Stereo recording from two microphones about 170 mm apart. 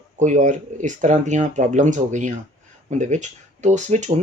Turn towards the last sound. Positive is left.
turn(degrees=-45)  # may be behind; listen again after turning